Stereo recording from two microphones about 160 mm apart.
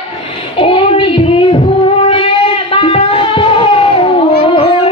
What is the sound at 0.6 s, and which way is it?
Child singing, 35° left (ahead or behind).